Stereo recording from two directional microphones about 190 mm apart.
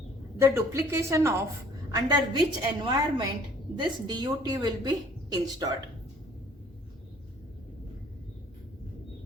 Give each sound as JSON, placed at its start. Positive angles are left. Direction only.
{"t": 0.3, "sound": "a woman's voice", "side_deg": -15}